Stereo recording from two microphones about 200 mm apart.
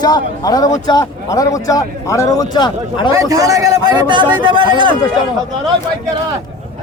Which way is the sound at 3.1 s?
15° right (ahead or behind).